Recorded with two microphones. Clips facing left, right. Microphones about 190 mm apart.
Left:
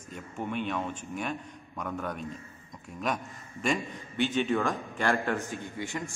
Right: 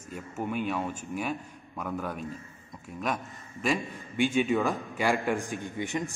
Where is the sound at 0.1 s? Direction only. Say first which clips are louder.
Right 2 dB; 5° right (ahead or behind).